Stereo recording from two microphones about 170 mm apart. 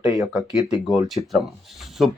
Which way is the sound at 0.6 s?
Centre (ahead or behind).